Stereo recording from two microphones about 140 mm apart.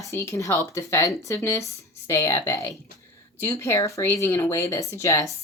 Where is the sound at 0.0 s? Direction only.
20° left (ahead or behind).